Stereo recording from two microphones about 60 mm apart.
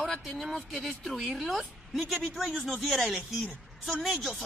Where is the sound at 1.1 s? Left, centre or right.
Centre.